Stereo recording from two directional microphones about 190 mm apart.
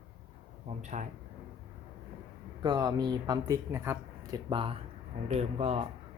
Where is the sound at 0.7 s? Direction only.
40° right (ahead or behind).